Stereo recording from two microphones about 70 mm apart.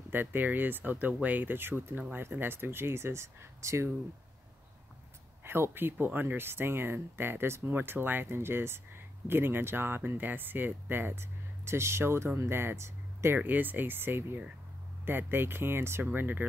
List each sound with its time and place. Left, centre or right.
0.1 s speech: right
5.4 s speech: right
13.4 s speech: right